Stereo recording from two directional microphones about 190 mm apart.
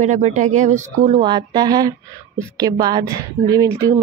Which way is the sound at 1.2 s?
20° right (ahead or behind).